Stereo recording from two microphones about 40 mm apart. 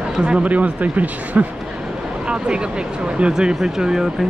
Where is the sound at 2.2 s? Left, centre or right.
Right.